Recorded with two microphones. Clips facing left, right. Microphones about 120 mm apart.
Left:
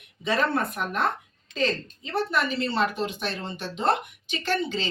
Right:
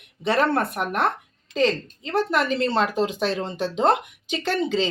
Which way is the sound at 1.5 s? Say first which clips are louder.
Right 5 dB; 80° right.